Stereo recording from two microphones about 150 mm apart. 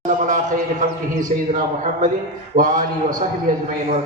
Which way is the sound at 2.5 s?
60° right (ahead or behind).